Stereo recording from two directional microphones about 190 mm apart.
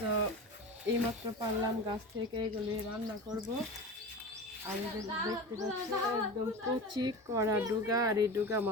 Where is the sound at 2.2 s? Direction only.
25° right (ahead or behind).